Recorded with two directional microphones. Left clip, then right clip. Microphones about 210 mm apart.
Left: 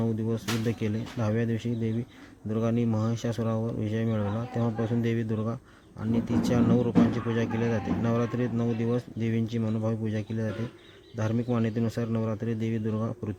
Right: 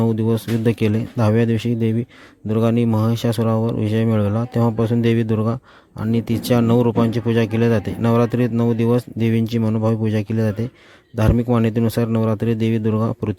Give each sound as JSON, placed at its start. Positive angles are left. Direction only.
{"t": 0.0, "sound": "speech", "side_deg": -40}